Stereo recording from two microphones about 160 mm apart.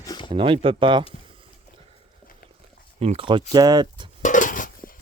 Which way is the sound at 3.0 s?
40° right (ahead or behind).